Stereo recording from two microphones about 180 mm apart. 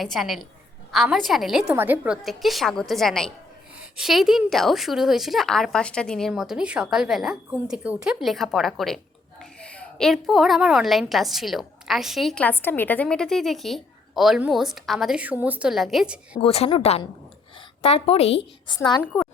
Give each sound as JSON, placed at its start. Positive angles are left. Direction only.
{"t": 0.0, "sound": "a woman's voice", "side_deg": 0}
{"t": 1.6, "sound": "a woman's voice", "side_deg": -10}
{"t": 16.4, "sound": "a woman's voice", "side_deg": 30}
{"t": 18.8, "sound": "a woman's voice", "side_deg": 25}